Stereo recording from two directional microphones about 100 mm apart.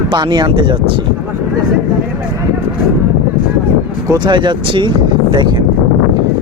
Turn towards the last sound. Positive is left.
turn(degrees=-50)  # may be behind; listen again after turning